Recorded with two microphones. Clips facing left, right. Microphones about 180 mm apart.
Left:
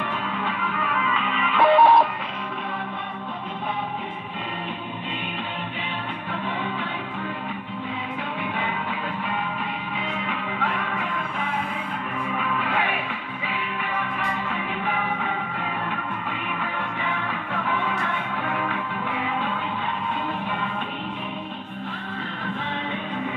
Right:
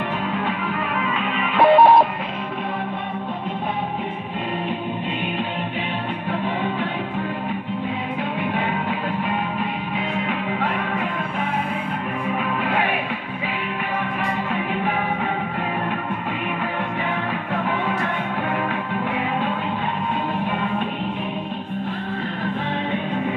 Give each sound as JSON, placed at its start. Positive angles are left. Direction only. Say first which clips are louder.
{"t": 1.2, "sound": "music", "louder": "right 2 dB", "side_deg": -50}
{"t": 1.6, "sound": "music", "louder": "right 3 dB", "side_deg": -35}
{"t": 17.6, "sound": "music", "louder": "right 1 dB", "side_deg": -45}